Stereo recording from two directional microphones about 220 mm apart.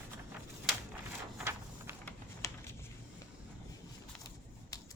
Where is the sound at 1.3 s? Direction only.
10° right (ahead or behind).